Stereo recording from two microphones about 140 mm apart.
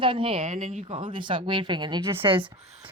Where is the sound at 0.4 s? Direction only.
65° right (ahead or behind).